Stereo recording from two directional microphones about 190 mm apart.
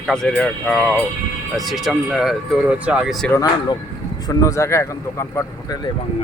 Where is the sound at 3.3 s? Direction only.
20° left (ahead or behind).